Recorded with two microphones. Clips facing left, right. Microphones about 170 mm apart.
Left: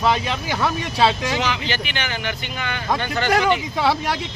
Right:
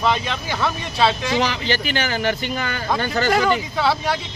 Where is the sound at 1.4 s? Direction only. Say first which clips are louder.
Right 3 dB; 35° right (ahead or behind).